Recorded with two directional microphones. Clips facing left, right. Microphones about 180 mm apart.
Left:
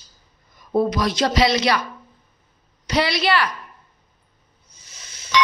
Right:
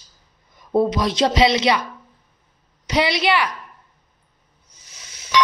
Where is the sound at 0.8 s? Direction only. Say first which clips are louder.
Right 1 dB; 25° right (ahead or behind).